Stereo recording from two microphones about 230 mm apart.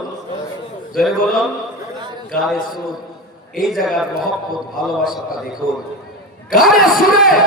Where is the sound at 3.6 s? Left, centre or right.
Centre.